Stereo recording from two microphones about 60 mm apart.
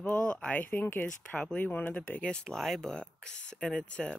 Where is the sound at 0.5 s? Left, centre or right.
Left.